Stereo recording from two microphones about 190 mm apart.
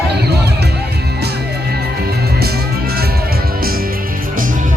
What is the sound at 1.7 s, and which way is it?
Music, 55° right (ahead or behind).